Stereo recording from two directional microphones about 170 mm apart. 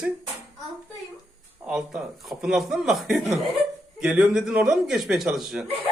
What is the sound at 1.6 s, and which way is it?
Speech, 5° right (ahead or behind).